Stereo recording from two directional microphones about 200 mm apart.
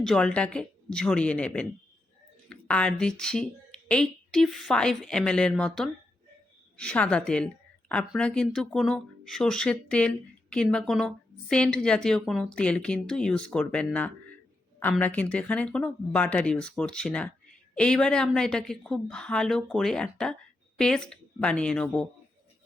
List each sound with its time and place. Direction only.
0.0 s a woman's voice: 5° left (ahead or behind)